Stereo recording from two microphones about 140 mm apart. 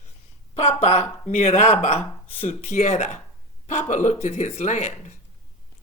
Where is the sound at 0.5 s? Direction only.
50° left (ahead or behind).